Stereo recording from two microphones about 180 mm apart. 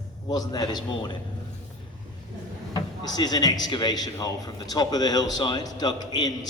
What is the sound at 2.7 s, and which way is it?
Speech, 20° left (ahead or behind).